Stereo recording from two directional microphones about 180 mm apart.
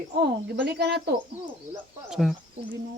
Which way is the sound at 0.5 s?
65° right (ahead or behind).